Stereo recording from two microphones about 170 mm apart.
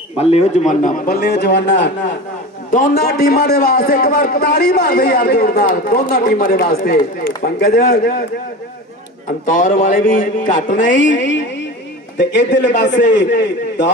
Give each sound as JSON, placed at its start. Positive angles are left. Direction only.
{"t": 0.2, "sound": "a man's voice", "side_deg": 40}
{"t": 2.7, "sound": "a man's voice", "side_deg": 60}
{"t": 9.5, "sound": "a man's voice", "side_deg": 55}
{"t": 11.0, "sound": "a man's voice", "side_deg": 90}